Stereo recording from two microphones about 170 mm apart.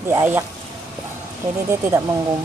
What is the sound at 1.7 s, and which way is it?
Speech, 15° right (ahead or behind).